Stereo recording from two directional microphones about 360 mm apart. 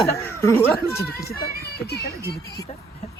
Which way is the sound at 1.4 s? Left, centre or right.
Left.